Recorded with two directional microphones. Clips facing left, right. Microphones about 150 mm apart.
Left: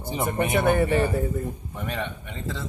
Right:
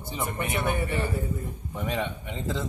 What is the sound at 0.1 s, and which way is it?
Speech, 25° left (ahead or behind).